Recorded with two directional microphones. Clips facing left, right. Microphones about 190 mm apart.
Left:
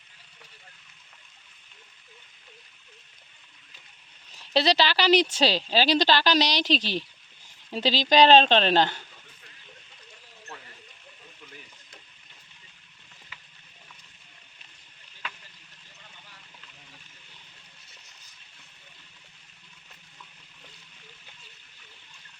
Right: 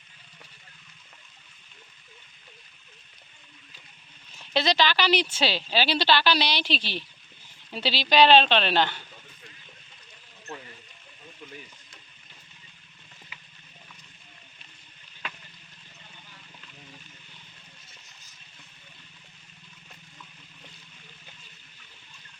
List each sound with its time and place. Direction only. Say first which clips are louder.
4.5 s a woman's voice: left 1 dB; 35° left (ahead or behind)